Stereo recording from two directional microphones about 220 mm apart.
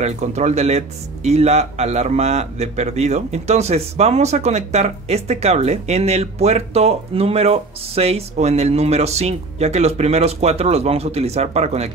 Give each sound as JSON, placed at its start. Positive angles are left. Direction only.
{"t": 0.0, "sound": "speech", "side_deg": -30}